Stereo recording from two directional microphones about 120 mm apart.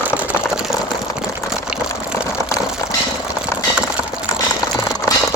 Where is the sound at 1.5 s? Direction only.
5° right (ahead or behind).